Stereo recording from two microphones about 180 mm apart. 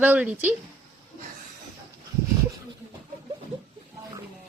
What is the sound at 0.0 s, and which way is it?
Speech, 10° right (ahead or behind).